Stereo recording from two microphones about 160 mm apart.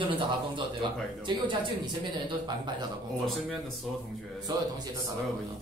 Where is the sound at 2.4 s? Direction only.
30° right (ahead or behind).